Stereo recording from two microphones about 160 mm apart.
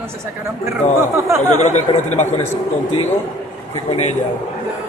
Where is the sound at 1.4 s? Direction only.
45° left (ahead or behind).